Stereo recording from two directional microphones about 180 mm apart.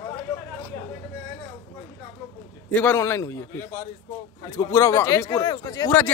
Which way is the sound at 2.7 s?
10° left (ahead or behind).